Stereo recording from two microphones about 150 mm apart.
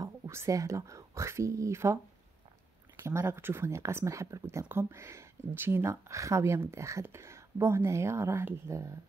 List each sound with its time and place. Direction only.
0.0 s speech: 20° right (ahead or behind)
3.0 s speech: 15° right (ahead or behind)